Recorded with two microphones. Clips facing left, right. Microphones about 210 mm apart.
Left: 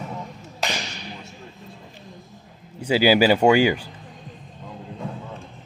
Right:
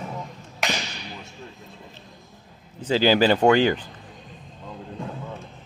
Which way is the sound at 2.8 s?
10° left (ahead or behind).